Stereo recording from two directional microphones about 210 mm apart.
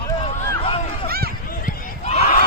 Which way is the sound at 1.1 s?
45° right (ahead or behind).